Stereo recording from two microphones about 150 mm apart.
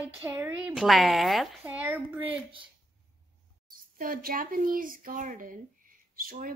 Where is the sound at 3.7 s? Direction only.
70° right (ahead or behind).